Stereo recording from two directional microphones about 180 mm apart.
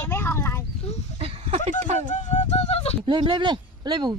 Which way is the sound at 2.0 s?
45° left (ahead or behind).